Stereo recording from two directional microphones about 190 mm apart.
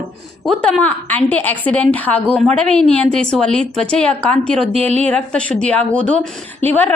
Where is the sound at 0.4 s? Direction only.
5° left (ahead or behind).